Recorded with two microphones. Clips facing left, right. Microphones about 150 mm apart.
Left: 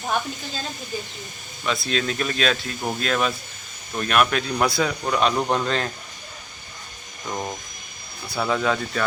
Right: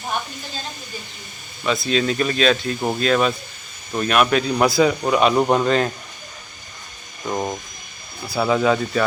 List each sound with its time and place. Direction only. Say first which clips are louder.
1.6 s speech: right 5 dB; centre (ahead or behind)
7.3 s speech: right 5 dB; 20° right (ahead or behind)
8.3 s speech: right 5 dB; 5° right (ahead or behind)